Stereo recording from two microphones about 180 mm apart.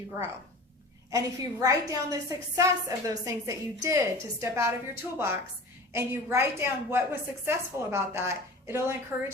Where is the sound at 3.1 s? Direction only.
20° right (ahead or behind).